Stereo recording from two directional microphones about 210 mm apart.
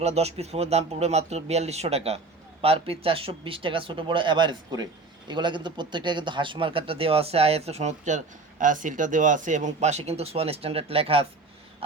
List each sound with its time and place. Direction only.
0.0 s speech: 30° right (ahead or behind)